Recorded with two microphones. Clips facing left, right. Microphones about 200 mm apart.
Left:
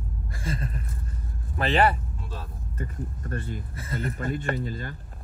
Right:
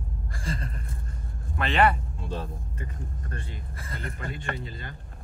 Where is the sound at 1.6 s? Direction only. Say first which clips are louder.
Left 1 dB; 35° left (ahead or behind).